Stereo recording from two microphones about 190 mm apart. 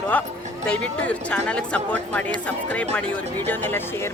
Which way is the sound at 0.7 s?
5° left (ahead or behind).